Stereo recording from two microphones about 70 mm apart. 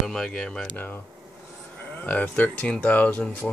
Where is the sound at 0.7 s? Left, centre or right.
Left.